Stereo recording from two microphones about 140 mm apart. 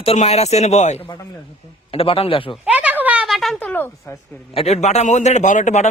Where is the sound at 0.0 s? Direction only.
45° left (ahead or behind).